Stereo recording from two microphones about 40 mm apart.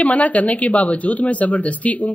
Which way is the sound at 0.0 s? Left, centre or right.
Left.